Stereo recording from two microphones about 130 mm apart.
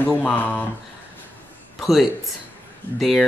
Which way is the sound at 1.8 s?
Centre (ahead or behind).